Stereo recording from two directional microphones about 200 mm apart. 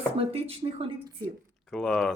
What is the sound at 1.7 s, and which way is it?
Speech, centre (ahead or behind).